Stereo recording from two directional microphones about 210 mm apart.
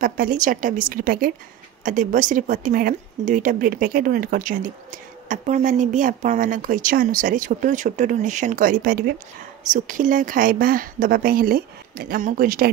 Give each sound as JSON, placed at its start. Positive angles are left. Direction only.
{"t": 0.0, "sound": "a woman's voice", "side_deg": -40}